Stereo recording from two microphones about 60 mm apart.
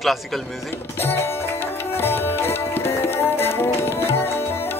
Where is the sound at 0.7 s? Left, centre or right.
Left.